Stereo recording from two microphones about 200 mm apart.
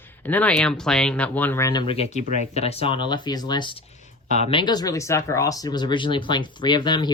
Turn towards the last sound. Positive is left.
turn(degrees=20)  # may be behind; listen again after turning